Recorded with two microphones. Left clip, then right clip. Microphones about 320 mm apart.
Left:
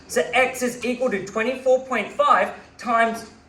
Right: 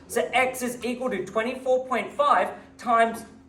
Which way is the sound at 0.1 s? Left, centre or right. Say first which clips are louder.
Left 3 dB; centre.